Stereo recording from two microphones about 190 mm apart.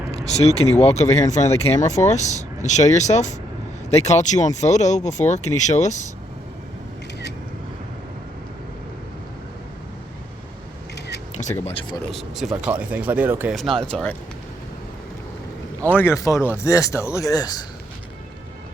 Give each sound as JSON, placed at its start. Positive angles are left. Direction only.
{"t": 0.1, "sound": "speech", "side_deg": 35}
{"t": 11.6, "sound": "speech", "side_deg": 30}
{"t": 12.1, "sound": "speech", "side_deg": 0}
{"t": 13.8, "sound": "speech", "side_deg": 5}
{"t": 16.0, "sound": "speech", "side_deg": 15}